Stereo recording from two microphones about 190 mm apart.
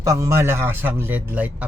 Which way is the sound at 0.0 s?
15° right (ahead or behind).